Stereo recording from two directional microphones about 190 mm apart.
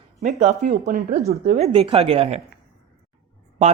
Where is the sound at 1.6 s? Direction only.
30° right (ahead or behind).